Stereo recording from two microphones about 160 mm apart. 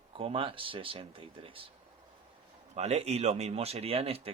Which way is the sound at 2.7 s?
40° right (ahead or behind).